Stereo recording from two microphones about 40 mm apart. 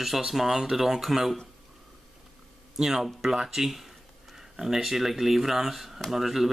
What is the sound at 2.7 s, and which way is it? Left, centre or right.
Speech, centre.